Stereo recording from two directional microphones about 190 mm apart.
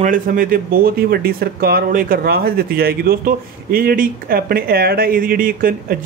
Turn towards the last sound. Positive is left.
turn(degrees=-50)  # may be behind; listen again after turning